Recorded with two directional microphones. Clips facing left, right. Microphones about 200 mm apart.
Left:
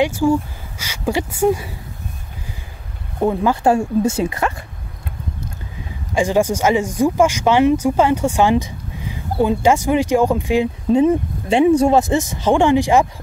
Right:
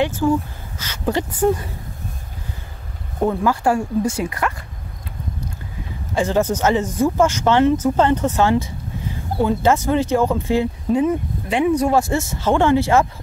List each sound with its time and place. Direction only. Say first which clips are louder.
0.0 s speech: left 2 dB; 10° left (ahead or behind)
3.3 s speech: left 3 dB; 20° left (ahead or behind)
6.1 s speech: left 2 dB; 15° left (ahead or behind)
10.9 s speech: left 5 dB; 25° left (ahead or behind)